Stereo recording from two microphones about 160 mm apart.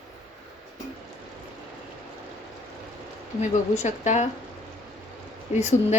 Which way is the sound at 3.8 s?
45° left (ahead or behind).